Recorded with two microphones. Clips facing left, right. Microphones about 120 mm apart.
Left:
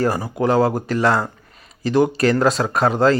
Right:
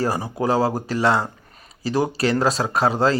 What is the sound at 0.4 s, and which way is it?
Speech, 35° right (ahead or behind).